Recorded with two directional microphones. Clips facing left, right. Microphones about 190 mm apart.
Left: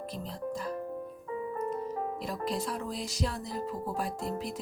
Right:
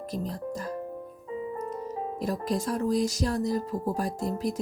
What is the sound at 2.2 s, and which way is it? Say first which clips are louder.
Speech: right 8 dB; 45° right (ahead or behind).